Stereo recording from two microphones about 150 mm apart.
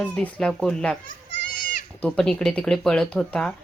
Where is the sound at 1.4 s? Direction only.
70° left (ahead or behind).